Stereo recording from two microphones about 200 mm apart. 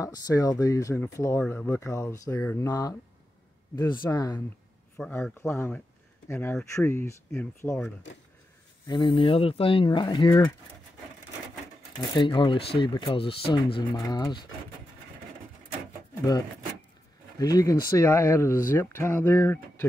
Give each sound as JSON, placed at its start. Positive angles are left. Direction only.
{"t": 0.0, "sound": "speech", "side_deg": 15}
{"t": 4.9, "sound": "speech", "side_deg": 5}
{"t": 8.8, "sound": "speech", "side_deg": 20}
{"t": 12.2, "sound": "speech", "side_deg": 25}
{"t": 17.4, "sound": "speech", "side_deg": 20}